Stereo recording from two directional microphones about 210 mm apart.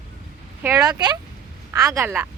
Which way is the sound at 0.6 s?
15° right (ahead or behind).